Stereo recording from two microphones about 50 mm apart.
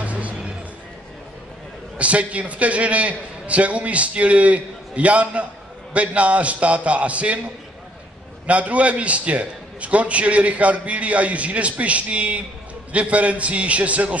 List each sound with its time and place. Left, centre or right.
0.0 s music: right
2.0 s a man's voice: right